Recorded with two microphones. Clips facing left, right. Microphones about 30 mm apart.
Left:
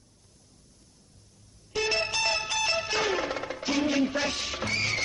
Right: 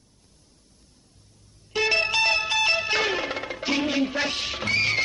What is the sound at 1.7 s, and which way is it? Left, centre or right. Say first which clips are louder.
Music: right 6 dB; right.